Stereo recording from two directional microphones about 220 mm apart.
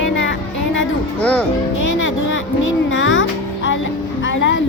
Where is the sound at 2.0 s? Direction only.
60° left (ahead or behind).